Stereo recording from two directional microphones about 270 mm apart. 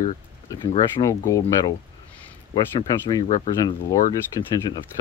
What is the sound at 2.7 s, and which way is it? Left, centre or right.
Speech, centre.